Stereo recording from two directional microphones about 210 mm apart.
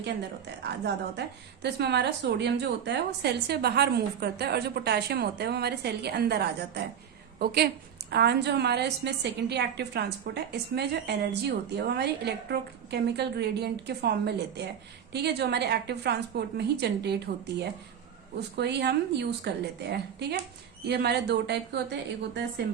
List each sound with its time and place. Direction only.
0.6 s a woman's voice: 55° right (ahead or behind)